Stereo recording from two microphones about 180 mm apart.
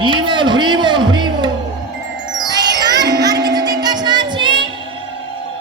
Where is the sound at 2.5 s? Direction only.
20° right (ahead or behind).